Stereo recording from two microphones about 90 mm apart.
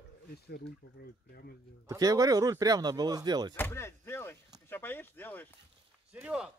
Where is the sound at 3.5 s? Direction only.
30° left (ahead or behind).